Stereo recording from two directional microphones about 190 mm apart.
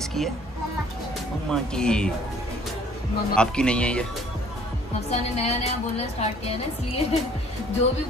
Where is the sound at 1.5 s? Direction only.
5° left (ahead or behind).